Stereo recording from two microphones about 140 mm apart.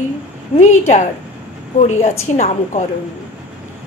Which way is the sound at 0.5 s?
55° left (ahead or behind).